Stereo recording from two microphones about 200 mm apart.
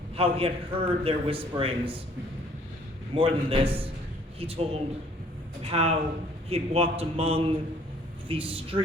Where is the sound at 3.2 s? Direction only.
25° right (ahead or behind).